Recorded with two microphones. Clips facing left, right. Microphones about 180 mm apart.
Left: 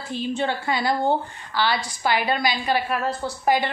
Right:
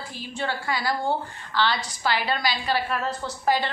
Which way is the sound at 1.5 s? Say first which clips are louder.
Left 1 dB; 10° left (ahead or behind).